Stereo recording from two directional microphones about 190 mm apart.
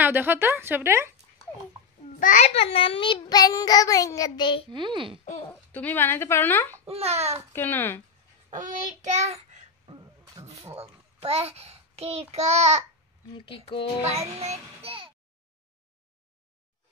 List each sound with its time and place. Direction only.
0.0 s speech: 10° right (ahead or behind)
2.1 s a child's voice: 45° left (ahead or behind); by 4.6 s 25° left (ahead or behind)
4.6 s a child's voice: 25° right (ahead or behind)
5.7 s speech: 10° left (ahead or behind)
6.9 s a child's voice: 35° right (ahead or behind)
7.5 s speech: 10° left (ahead or behind)
8.5 s child singing: 40° right (ahead or behind)
9.8 s a sound: 25° right (ahead or behind)
10.8 s a child's voice: 30° right (ahead or behind)
13.5 s a child's voice: 25° left (ahead or behind)
14.4 s a child's voice: 35° right (ahead or behind)